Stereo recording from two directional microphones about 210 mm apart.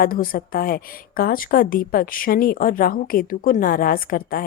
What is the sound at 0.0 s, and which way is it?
A woman's voice, 45° left (ahead or behind).